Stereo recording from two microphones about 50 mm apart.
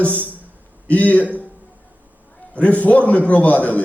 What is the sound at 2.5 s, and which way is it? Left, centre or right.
A man's voice, left.